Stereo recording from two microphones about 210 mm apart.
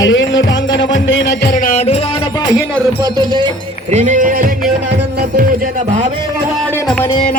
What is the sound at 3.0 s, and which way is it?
Music, 20° right (ahead or behind).